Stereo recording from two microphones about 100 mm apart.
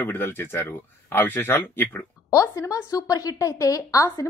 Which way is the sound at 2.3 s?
35° left (ahead or behind).